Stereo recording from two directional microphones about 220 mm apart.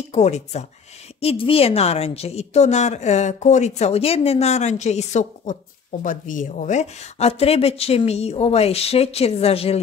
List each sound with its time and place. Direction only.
0.1 s a woman's voice: 30° left (ahead or behind)